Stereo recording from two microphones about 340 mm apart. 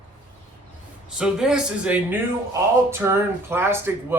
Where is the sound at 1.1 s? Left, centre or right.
Centre.